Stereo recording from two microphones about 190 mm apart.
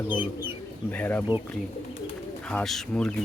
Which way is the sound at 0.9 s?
10° left (ahead or behind).